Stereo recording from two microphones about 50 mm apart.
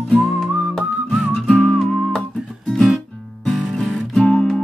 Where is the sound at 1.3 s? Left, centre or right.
Centre.